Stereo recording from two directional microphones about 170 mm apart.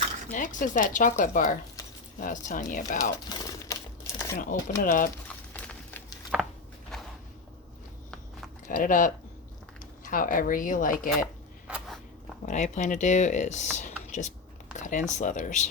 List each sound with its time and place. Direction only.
0.3 s speech: 50° left (ahead or behind)
3.0 s crumpling: 20° left (ahead or behind)
4.8 s speech: 55° left (ahead or behind)
5.5 s a sound: 10° left (ahead or behind)
6.3 s a sound: 5° right (ahead or behind)
8.6 s speech: 50° left (ahead or behind)
12.5 s speech: 45° left (ahead or behind)